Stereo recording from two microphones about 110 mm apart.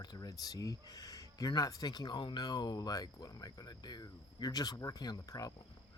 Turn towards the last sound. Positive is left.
turn(degrees=35)  # may be behind; listen again after turning